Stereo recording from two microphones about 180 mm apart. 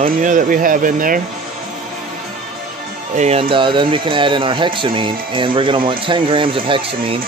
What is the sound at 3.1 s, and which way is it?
Speech, 35° right (ahead or behind).